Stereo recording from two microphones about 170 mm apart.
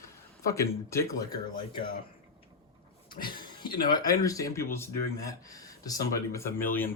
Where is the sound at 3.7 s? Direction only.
60° left (ahead or behind).